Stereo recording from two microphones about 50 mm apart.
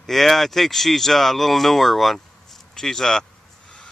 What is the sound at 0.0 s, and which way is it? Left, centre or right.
Speech, centre.